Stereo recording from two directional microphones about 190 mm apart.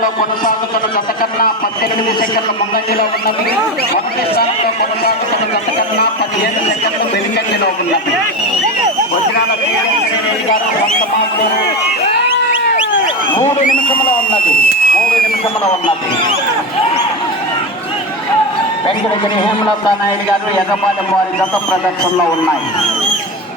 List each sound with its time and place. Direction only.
4.4 s a man's voice: 55° left (ahead or behind)
13.4 s speech: 45° left (ahead or behind)